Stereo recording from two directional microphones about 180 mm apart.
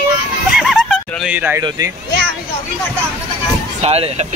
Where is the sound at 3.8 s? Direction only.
35° right (ahead or behind).